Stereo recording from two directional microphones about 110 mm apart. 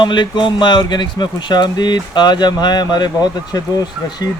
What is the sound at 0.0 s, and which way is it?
A man's voice, 45° left (ahead or behind).